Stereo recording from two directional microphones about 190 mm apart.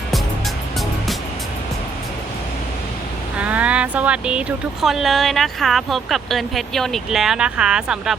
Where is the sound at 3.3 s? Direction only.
5° right (ahead or behind).